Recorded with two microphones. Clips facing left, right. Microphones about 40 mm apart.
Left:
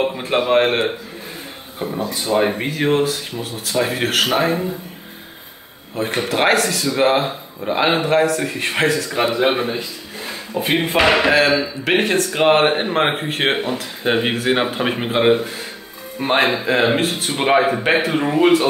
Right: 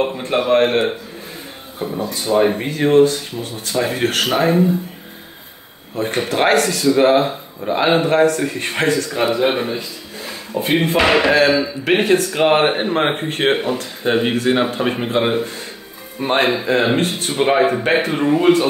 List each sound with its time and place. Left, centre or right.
0.0 s speech: centre
5.9 s speech: centre
9.1 s speech: centre
14.0 s speech: centre